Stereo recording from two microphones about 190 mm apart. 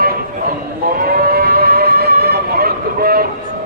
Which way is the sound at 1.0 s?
55° right (ahead or behind).